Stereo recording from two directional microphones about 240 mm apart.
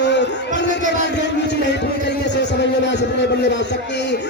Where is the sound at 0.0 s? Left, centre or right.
Left.